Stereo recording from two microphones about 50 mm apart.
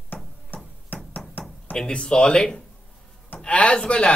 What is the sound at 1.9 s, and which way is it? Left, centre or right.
Speech, centre.